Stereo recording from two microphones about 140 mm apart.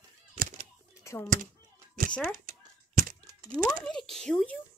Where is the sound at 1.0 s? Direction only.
20° left (ahead or behind).